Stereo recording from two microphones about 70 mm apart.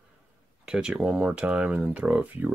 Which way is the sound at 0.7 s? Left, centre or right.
Centre.